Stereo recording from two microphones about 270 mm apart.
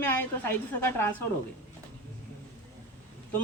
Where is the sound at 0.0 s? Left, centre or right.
Centre.